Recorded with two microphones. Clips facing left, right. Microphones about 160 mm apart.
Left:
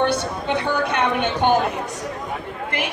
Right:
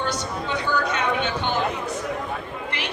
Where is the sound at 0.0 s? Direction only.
60° left (ahead or behind).